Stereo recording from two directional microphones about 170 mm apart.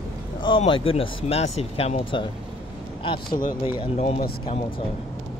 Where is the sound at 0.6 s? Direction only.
35° left (ahead or behind).